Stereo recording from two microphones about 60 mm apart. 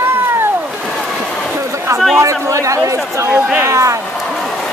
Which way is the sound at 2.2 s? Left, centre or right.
Right.